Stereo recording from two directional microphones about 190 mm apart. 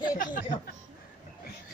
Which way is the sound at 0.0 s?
45° left (ahead or behind).